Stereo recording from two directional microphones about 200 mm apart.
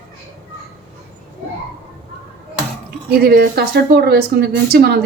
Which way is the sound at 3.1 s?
55° right (ahead or behind).